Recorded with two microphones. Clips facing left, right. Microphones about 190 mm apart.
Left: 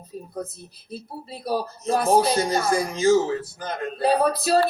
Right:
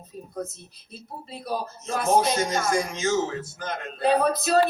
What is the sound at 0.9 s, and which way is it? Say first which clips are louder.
Speech: left 4 dB; 35° left (ahead or behind).